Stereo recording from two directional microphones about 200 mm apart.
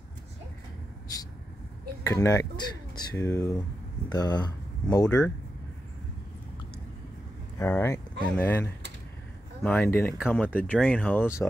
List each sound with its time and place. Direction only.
2.0 s speech: 15° left (ahead or behind)
5.0 s speech: 5° left (ahead or behind)
7.5 s speech: 10° left (ahead or behind)